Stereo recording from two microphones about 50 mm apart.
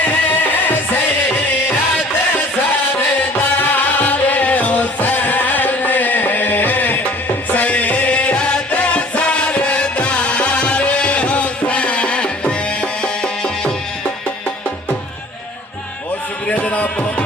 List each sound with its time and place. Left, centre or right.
0.0 s music: left
3.3 s music: left; by 13.7 s centre
16.5 s music: left